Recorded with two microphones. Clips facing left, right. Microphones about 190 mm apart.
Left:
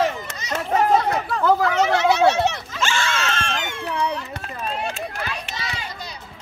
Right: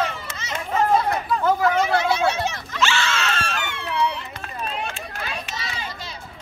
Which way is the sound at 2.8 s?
50° left (ahead or behind).